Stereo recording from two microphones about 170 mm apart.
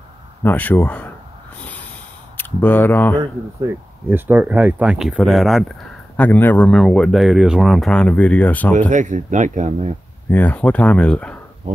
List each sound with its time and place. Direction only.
0.4 s speech: 10° left (ahead or behind)
2.3 s speech: 10° left (ahead or behind)
3.6 s speech: 10° right (ahead or behind); by 8.7 s 10° left (ahead or behind)
8.7 s speech: 45° right (ahead or behind)
10.3 s speech: 10° left (ahead or behind)
11.7 s speech: 50° right (ahead or behind)